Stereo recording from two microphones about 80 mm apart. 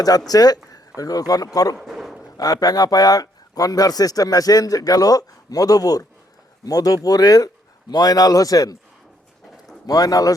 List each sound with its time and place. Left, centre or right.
0.3 s speech: left
1.8 s a sound: centre
2.4 s speech: left
9.8 s speech: left